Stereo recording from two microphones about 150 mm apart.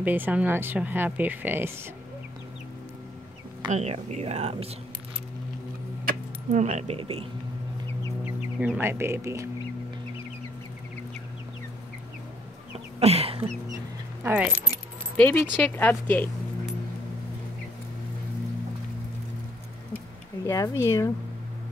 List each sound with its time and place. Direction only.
0.0 s speech: 10° right (ahead or behind)
3.7 s speech: 50° right (ahead or behind)
6.5 s speech: 50° right (ahead or behind)
8.5 s speech: 10° right (ahead or behind)
13.0 s a sound: 40° right (ahead or behind)
14.2 s speech: 10° right (ahead or behind)
15.1 s speech: 10° left (ahead or behind)
20.4 s speech: 20° left (ahead or behind)